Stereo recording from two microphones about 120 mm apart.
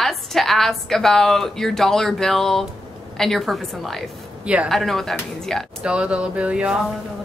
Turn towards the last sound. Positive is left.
turn(degrees=-10)  # may be behind; listen again after turning